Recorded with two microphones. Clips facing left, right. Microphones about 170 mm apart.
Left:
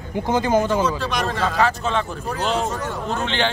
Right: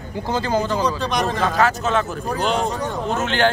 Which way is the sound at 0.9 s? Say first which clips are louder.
Right 2 dB; 15° right (ahead or behind).